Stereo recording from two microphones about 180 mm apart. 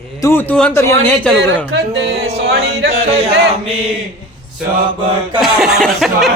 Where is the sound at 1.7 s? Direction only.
80° right.